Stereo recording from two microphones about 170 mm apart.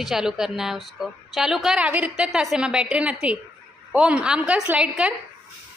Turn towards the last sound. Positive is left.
turn(degrees=-5)  # may be behind; listen again after turning